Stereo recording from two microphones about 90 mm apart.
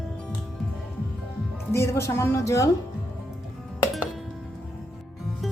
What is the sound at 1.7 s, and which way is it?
A woman's voice, 30° left (ahead or behind).